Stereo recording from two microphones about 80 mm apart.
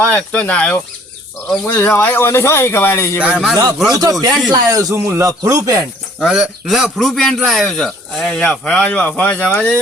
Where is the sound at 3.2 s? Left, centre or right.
Centre.